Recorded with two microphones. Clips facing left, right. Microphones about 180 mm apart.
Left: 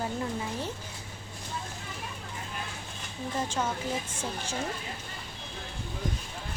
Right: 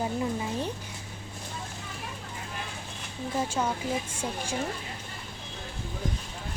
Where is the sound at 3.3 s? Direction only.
10° right (ahead or behind).